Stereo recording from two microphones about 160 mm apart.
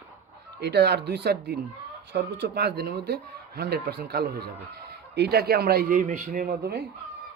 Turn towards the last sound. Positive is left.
turn(degrees=-65)  # may be behind; listen again after turning